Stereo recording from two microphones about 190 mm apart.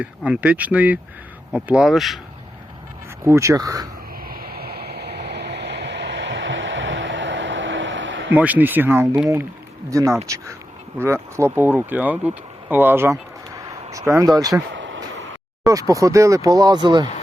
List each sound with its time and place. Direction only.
0.0 s speech: 5° right (ahead or behind)
3.2 s speech: 15° right (ahead or behind)
4.3 s vehicle: 50° right (ahead or behind); by 8.3 s 75° right (ahead or behind)
8.3 s speech: 10° right (ahead or behind)
14.7 s vehicle: 80° right
15.6 s speech: 15° right (ahead or behind)